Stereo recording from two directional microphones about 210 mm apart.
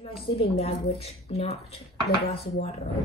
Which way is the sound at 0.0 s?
30° left (ahead or behind).